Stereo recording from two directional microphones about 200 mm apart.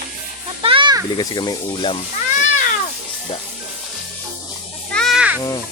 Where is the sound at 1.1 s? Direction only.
20° left (ahead or behind).